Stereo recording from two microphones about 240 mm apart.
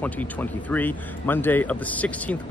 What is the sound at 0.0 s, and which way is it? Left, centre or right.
Speech, centre.